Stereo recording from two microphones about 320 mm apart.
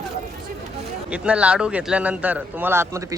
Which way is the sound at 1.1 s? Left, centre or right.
Centre.